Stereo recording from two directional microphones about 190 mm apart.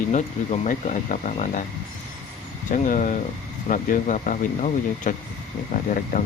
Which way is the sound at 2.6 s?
45° left (ahead or behind).